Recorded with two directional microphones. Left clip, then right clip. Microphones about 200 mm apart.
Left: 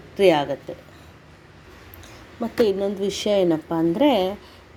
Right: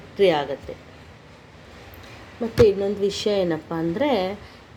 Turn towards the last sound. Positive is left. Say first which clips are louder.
# left 3 dB
turn(degrees=25)  # may be behind; listen again after turning